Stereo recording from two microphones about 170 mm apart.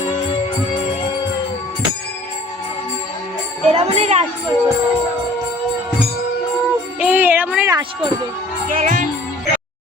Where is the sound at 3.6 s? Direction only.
40° right (ahead or behind).